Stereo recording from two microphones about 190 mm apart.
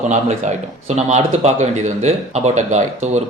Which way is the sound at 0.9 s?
35° right (ahead or behind).